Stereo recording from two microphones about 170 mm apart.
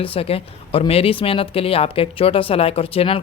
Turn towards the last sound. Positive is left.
turn(degrees=35)  # may be behind; listen again after turning